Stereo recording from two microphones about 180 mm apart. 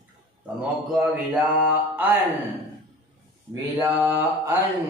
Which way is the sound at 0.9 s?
5° right (ahead or behind).